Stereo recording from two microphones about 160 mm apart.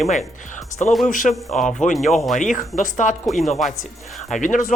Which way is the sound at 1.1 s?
55° left (ahead or behind).